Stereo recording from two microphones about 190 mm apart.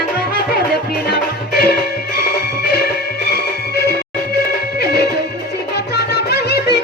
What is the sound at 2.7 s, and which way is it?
Music, 55° left (ahead or behind).